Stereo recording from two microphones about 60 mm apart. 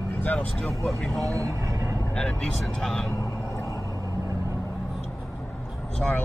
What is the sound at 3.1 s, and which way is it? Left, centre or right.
Vehicle, left.